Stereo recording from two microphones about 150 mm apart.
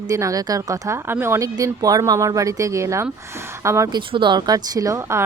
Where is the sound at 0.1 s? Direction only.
20° right (ahead or behind).